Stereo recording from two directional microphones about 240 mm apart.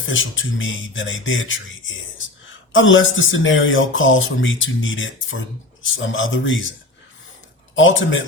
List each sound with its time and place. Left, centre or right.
0.1 s speech: left
7.8 s speech: left